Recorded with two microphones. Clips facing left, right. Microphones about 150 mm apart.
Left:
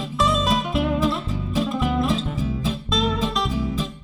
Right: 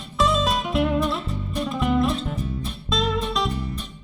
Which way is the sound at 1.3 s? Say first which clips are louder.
Left 3 dB; 90° left.